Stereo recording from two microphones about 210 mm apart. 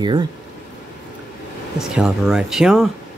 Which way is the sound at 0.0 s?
20° right (ahead or behind).